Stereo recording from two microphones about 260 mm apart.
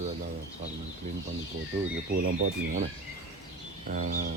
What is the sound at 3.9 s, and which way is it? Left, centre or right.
Bird, right.